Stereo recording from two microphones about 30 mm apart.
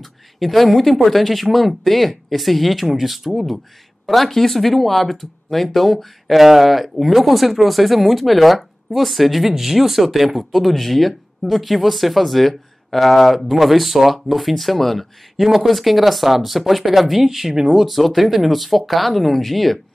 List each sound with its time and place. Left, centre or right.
0.0 s speech: centre
15.4 s speech: centre